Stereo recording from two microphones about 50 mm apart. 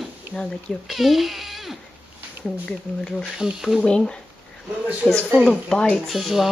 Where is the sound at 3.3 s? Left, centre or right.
Centre.